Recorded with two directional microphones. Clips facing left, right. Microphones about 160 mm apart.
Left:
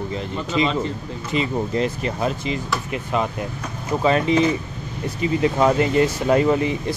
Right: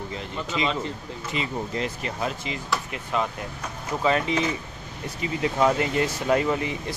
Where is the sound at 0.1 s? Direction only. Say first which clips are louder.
Left 6 dB; 30° left (ahead or behind).